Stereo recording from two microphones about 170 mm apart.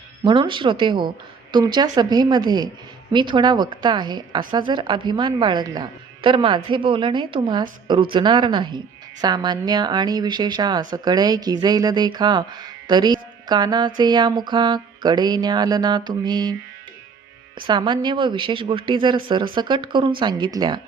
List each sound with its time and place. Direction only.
0.3 s a woman's voice: 30° right (ahead or behind)
17.7 s a woman's voice: 25° right (ahead or behind)